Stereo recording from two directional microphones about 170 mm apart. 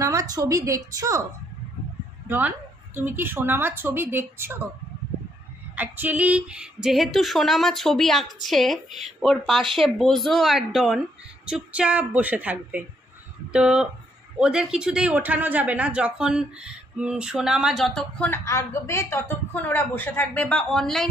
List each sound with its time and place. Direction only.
0.0 s a woman's voice: 20° right (ahead or behind)
2.2 s speech: 10° right (ahead or behind)
5.8 s speech: 10° right (ahead or behind)